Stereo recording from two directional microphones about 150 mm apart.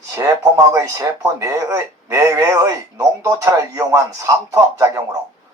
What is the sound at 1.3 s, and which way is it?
Speech, 20° right (ahead or behind).